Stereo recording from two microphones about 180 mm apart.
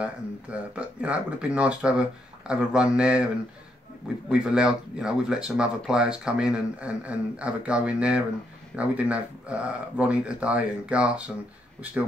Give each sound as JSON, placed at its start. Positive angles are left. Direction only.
{"t": 0.0, "sound": "speech", "side_deg": -5}
{"t": 4.3, "sound": "speech", "side_deg": -5}